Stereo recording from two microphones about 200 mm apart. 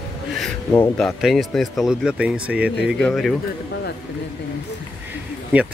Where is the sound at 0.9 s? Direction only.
Centre (ahead or behind).